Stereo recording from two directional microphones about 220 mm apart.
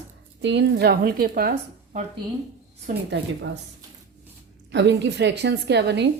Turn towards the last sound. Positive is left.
turn(degrees=-50)  # may be behind; listen again after turning